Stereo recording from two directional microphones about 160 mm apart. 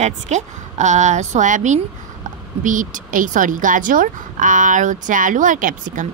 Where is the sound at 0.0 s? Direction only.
50° right (ahead or behind).